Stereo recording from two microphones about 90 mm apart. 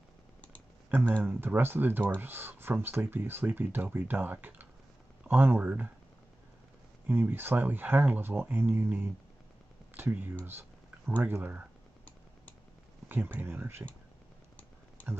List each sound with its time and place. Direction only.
0.8 s speech: 20° right (ahead or behind)
7.1 s speech: 25° right (ahead or behind)
13.1 s speech: 25° right (ahead or behind)